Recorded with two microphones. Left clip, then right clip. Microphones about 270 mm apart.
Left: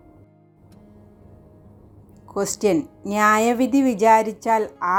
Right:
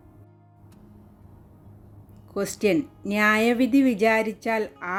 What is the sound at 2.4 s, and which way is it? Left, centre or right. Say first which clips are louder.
Speech: left 3 dB; centre.